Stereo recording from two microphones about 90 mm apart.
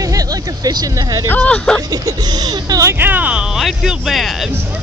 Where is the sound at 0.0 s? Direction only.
40° right (ahead or behind).